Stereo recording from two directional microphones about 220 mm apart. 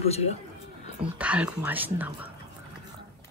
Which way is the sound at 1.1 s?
5° right (ahead or behind).